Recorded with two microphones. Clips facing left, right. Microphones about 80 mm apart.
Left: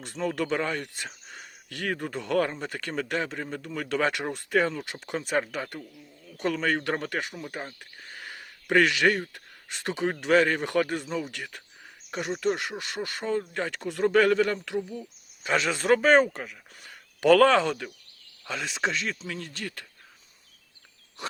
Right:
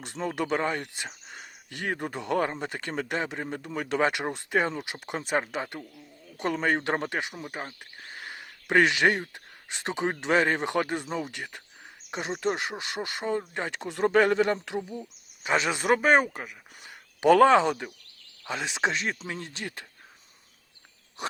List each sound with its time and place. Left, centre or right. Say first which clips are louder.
0.0 s speech: left 1 dB; right
21.2 s speech: right 2 dB; right